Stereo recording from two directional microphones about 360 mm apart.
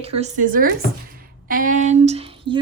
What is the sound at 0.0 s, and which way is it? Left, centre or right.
A woman's voice, centre.